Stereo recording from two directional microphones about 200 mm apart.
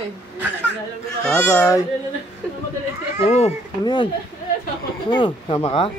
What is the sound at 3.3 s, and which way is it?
Speech, 35° left (ahead or behind).